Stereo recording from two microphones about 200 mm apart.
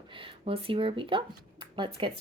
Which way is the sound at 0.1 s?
25° right (ahead or behind).